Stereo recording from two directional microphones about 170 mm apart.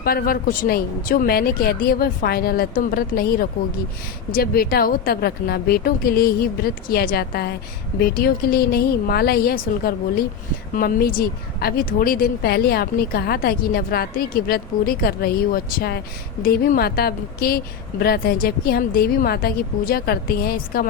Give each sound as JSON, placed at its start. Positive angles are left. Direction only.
{"t": 0.0, "sound": "a woman's voice", "side_deg": 60}
{"t": 4.3, "sound": "a woman's voice", "side_deg": 60}